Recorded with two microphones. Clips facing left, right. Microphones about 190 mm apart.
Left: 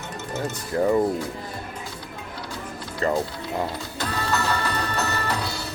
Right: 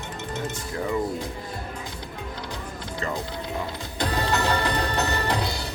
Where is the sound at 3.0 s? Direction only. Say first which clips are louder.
Left 7 dB; 35° left (ahead or behind).